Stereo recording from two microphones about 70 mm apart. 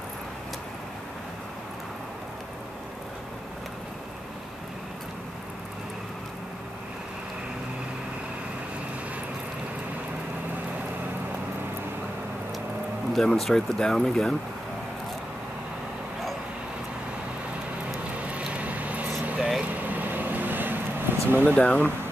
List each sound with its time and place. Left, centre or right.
13.1 s speech: centre
18.2 s vehicle: centre
21.3 s speech: right
21.5 s speech: centre